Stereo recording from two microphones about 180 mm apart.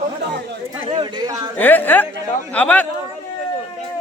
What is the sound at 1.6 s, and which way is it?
A woman's voice, 10° left (ahead or behind).